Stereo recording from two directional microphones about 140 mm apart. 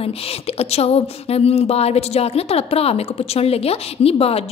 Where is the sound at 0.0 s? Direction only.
45° left (ahead or behind).